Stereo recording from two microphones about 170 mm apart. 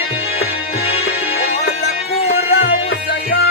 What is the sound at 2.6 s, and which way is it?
Music, 90° left.